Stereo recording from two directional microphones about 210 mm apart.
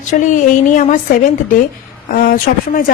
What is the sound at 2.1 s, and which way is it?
Speech, 45° left (ahead or behind).